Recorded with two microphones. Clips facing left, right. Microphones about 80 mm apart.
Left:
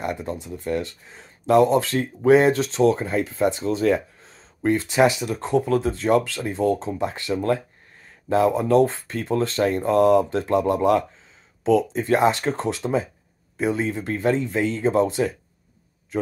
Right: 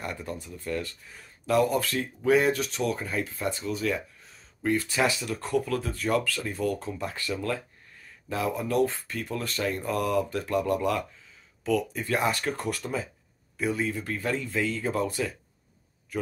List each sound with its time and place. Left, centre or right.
0.0 s speech: left